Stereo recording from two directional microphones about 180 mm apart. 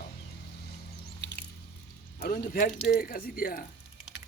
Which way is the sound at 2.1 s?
50° left (ahead or behind).